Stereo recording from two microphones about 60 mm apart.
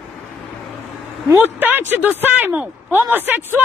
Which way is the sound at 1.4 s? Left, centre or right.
Right.